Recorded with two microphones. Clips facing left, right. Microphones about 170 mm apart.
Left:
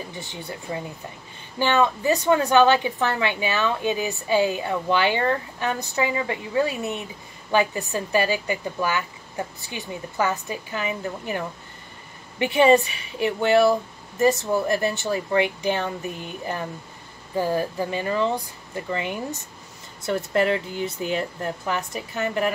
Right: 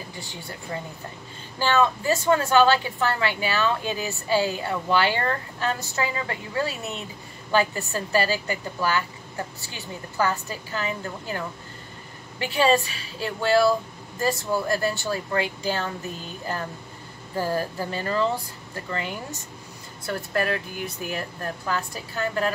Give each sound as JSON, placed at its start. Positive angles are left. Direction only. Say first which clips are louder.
{"t": 0.3, "sound": "a woman's voice", "louder": "left 2 dB", "side_deg": 20}
{"t": 17.4, "sound": "a woman's voice", "louder": "left 3 dB", "side_deg": 15}